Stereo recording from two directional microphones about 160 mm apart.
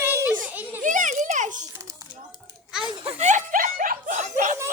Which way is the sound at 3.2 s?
50° right (ahead or behind).